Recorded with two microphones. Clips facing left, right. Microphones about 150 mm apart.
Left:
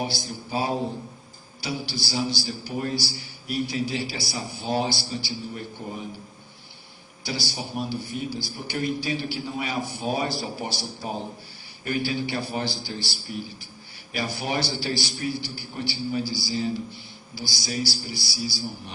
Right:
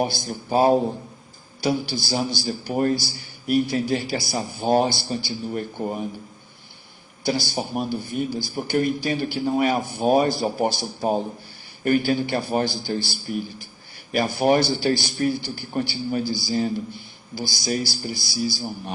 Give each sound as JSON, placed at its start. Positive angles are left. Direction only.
{"t": 0.0, "sound": "a man's voice", "side_deg": -50}
{"t": 7.3, "sound": "a man's voice", "side_deg": -50}